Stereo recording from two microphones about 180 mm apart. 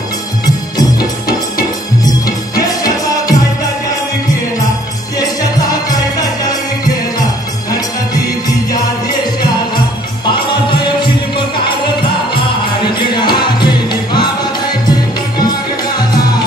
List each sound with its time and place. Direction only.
2.6 s music: 20° left (ahead or behind)
13.1 s music: 25° left (ahead or behind)